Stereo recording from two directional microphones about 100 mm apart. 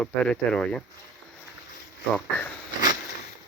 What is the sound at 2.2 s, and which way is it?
Speech, 20° left (ahead or behind).